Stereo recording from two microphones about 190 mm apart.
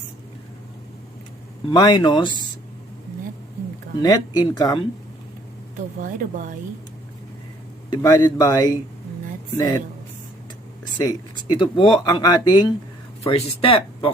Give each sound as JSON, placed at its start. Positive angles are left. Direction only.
{"t": 1.7, "sound": "speech", "side_deg": 20}
{"t": 4.0, "sound": "speech", "side_deg": 20}
{"t": 6.0, "sound": "speech", "side_deg": -45}
{"t": 7.9, "sound": "speech", "side_deg": 15}
{"t": 10.9, "sound": "speech", "side_deg": 20}